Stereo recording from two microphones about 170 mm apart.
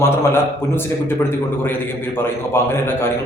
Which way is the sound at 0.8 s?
15° left (ahead or behind).